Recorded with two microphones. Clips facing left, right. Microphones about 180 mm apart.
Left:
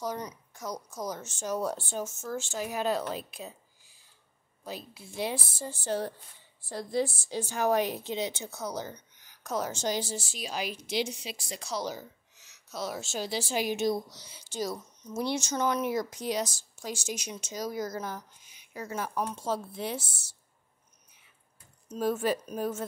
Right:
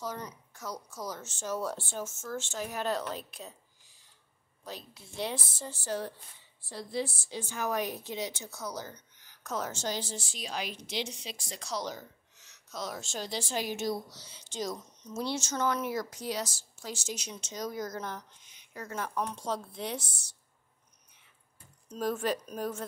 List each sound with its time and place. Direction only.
0.0 s a woman's voice: 15° left (ahead or behind)
4.6 s a woman's voice: 10° left (ahead or behind)
6.6 s a woman's voice: 45° left (ahead or behind); by 20.3 s 5° left (ahead or behind)
21.8 s a woman's voice: 5° left (ahead or behind)